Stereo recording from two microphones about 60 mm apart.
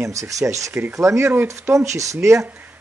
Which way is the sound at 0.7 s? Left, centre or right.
Right.